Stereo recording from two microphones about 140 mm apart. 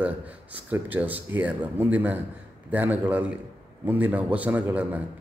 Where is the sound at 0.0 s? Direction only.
10° right (ahead or behind).